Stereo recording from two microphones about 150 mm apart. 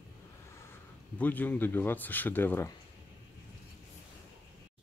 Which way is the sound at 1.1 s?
10° left (ahead or behind).